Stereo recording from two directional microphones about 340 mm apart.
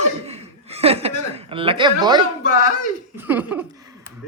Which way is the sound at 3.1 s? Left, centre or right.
Centre.